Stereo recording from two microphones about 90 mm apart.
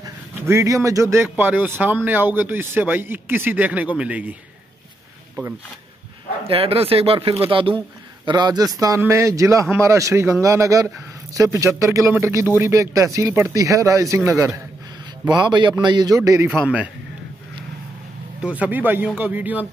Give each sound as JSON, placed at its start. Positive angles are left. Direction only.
{"t": 0.5, "sound": "a man's voice", "side_deg": -35}
{"t": 1.3, "sound": "a man's voice", "side_deg": -20}
{"t": 6.4, "sound": "speech", "side_deg": -90}
{"t": 8.3, "sound": "a man's voice", "side_deg": -50}
{"t": 8.7, "sound": "a man's voice", "side_deg": -40}
{"t": 15.2, "sound": "a man's voice", "side_deg": -55}
{"t": 16.2, "sound": "a man's voice", "side_deg": -35}
{"t": 16.4, "sound": "a man's voice", "side_deg": -15}
{"t": 18.4, "sound": "a man's voice", "side_deg": -15}